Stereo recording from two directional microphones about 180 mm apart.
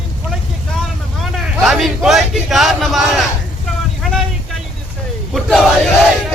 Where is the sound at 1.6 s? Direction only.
Centre (ahead or behind).